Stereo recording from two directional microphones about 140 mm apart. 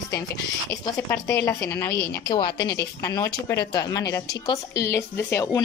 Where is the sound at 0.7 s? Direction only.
25° left (ahead or behind).